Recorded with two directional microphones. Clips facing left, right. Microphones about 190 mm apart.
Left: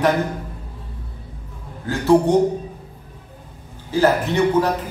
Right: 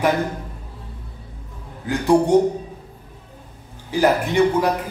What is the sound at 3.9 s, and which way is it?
Speech, 15° right (ahead or behind).